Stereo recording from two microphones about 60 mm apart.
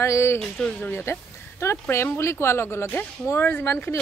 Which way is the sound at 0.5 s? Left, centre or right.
Centre.